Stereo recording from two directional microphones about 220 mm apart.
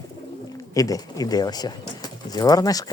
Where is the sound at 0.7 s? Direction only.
15° left (ahead or behind).